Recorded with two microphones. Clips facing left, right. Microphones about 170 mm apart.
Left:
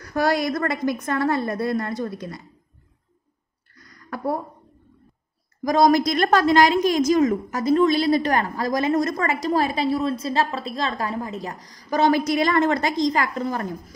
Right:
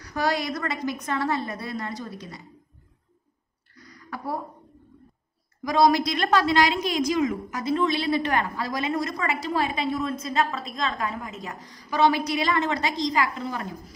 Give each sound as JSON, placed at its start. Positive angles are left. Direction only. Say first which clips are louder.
{"t": 0.0, "sound": "a woman's voice", "louder": "left 5 dB", "side_deg": 50}
{"t": 3.7, "sound": "a sound", "louder": "left 4 dB", "side_deg": 50}
{"t": 5.6, "sound": "a woman's voice", "louder": "left 3 dB", "side_deg": 45}